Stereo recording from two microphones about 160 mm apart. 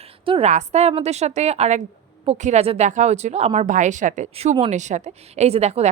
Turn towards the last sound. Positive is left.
turn(degrees=-40)  # may be behind; listen again after turning